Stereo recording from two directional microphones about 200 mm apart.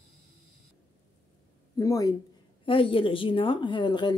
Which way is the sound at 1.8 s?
15° left (ahead or behind).